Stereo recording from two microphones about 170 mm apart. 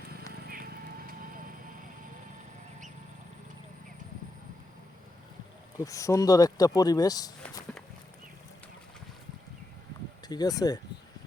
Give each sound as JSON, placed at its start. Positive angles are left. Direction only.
{"t": 0.4, "sound": "clip-clop", "side_deg": -60}
{"t": 5.8, "sound": "speech", "side_deg": 20}
{"t": 10.2, "sound": "speech", "side_deg": 25}